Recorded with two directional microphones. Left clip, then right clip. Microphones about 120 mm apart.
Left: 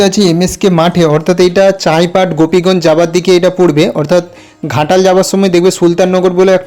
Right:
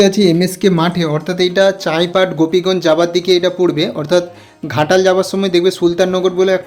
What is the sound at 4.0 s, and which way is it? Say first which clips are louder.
Speech: left 4 dB; 50° left (ahead or behind).